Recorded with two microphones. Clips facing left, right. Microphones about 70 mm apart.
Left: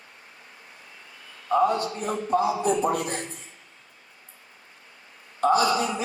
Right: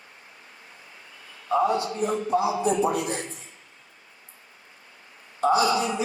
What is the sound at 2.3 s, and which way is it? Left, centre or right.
Speech, left.